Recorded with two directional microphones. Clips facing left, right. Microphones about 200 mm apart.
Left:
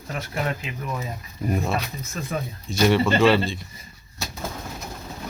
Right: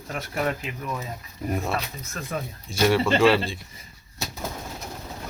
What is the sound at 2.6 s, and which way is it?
Speech, 10° right (ahead or behind).